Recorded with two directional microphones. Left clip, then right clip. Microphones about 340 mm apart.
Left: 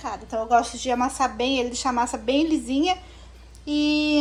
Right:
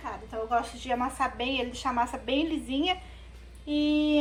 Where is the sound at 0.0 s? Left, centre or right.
Centre.